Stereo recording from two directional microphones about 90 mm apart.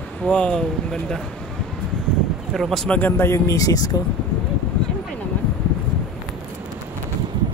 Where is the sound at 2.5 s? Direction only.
5° left (ahead or behind).